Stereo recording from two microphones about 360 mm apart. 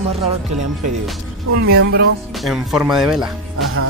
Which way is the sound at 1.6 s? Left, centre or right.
Right.